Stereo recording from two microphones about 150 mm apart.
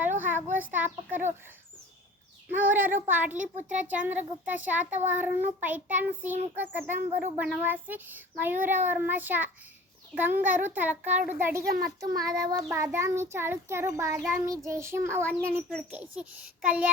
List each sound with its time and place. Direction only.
0.0 s a sound: 15° right (ahead or behind)
0.5 s a child's voice: 10° right (ahead or behind)
2.5 s a child's voice: 10° right (ahead or behind)
11.6 s a child's voice: 85° right
12.0 s child singing: 25° right (ahead or behind)
13.3 s a child's voice: 15° right (ahead or behind)